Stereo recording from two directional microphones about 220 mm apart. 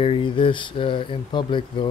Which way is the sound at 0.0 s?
25° left (ahead or behind).